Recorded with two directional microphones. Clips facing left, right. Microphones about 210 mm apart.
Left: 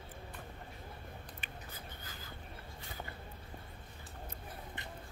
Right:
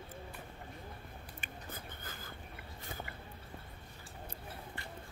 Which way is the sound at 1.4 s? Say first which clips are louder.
Right 2 dB; 50° right (ahead or behind).